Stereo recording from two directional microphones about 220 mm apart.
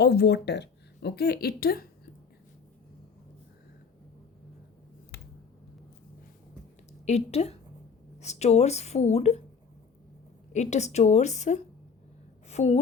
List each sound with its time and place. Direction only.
0.0 s speech: 45° left (ahead or behind)
5.1 s a sound: 45° left (ahead or behind)
7.0 s speech: 30° left (ahead or behind)
10.5 s a woman's voice: 30° left (ahead or behind)